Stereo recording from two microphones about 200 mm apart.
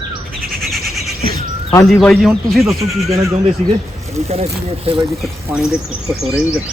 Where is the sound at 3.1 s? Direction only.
30° right (ahead or behind).